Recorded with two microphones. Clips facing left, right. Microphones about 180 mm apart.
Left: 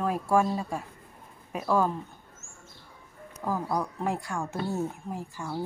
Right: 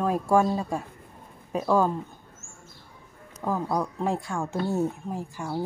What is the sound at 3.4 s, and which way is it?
A woman's voice, 15° right (ahead or behind).